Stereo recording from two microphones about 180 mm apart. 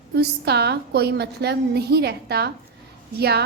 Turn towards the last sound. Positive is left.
turn(degrees=-65)  # may be behind; listen again after turning